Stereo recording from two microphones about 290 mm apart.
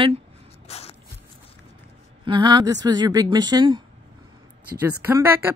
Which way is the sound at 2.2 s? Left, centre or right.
Centre.